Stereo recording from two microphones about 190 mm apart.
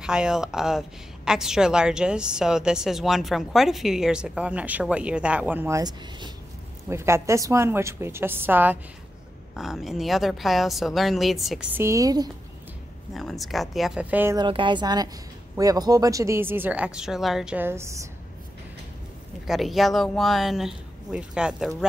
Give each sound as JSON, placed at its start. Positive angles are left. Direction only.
{"t": 0.0, "sound": "a woman's voice", "side_deg": -5}
{"t": 11.8, "sound": "speech", "side_deg": -15}
{"t": 13.1, "sound": "a woman's voice", "side_deg": 0}
{"t": 14.3, "sound": "speech", "side_deg": -25}
{"t": 19.4, "sound": "a woman's voice", "side_deg": 0}